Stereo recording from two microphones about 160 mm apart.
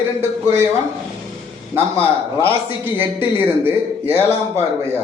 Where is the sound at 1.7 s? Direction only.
15° right (ahead or behind).